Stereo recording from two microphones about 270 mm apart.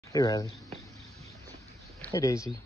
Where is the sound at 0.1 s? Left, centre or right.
Centre.